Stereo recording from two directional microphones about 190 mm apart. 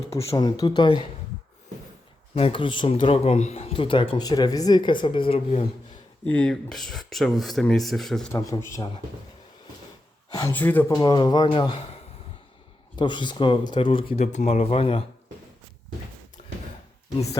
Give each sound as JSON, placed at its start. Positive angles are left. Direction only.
{"t": 0.1, "sound": "speech", "side_deg": 25}
{"t": 2.3, "sound": "speech", "side_deg": 30}
{"t": 6.2, "sound": "speech", "side_deg": 5}
{"t": 8.3, "sound": "a man's voice", "side_deg": 15}
{"t": 10.3, "sound": "speech", "side_deg": 10}
{"t": 13.0, "sound": "speech", "side_deg": 25}